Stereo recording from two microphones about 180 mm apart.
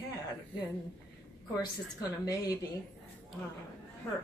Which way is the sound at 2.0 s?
20° left (ahead or behind).